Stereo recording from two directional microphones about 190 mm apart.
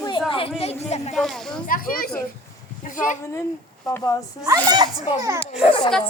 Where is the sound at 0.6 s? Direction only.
35° left (ahead or behind).